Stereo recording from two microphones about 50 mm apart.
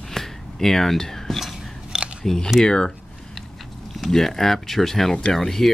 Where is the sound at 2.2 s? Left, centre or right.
Centre.